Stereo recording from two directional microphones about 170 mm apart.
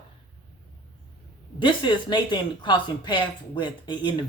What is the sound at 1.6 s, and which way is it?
Speech, 25° left (ahead or behind).